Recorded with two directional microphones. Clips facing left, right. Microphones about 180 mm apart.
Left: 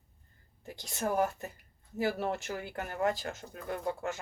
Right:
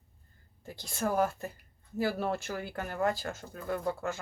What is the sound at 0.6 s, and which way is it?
Speech, 15° left (ahead or behind).